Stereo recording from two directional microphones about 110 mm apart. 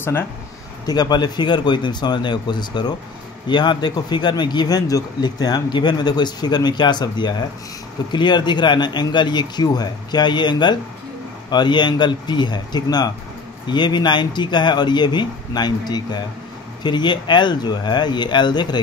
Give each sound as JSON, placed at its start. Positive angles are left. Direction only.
{"t": 0.8, "sound": "speech", "side_deg": 40}